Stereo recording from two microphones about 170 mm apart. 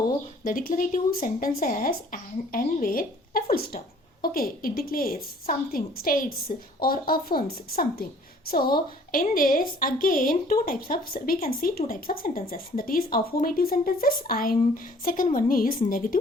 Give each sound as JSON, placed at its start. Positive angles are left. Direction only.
{"t": 0.4, "sound": "a woman's voice", "side_deg": 55}